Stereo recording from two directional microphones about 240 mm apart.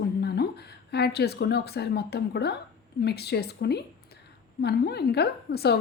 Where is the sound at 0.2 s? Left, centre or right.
Left.